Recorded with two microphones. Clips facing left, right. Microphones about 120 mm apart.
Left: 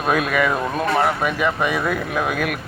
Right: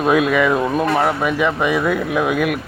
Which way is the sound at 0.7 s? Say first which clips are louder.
Right 2 dB; 10° right (ahead or behind).